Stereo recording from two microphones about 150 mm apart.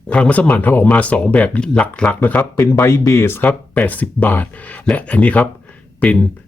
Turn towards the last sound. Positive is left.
turn(degrees=10)  # may be behind; listen again after turning